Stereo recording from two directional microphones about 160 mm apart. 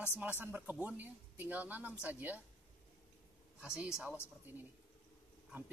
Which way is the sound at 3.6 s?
5° right (ahead or behind).